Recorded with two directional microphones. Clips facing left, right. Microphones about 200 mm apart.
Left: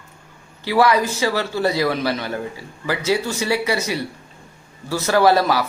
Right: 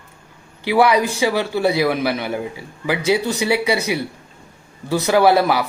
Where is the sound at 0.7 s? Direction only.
15° right (ahead or behind).